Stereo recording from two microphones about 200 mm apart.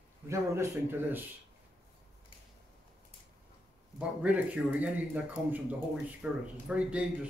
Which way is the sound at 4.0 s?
5° right (ahead or behind).